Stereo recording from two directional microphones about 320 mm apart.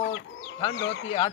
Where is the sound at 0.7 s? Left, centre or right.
Left.